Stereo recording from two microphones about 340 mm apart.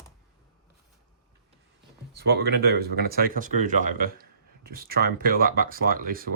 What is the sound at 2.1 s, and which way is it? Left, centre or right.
Speech, right.